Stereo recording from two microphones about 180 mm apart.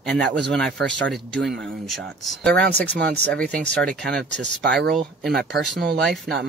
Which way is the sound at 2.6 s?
65° right (ahead or behind).